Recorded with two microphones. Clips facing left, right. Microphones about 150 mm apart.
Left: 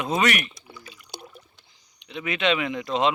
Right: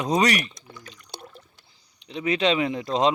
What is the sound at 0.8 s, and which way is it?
Water, 5° left (ahead or behind).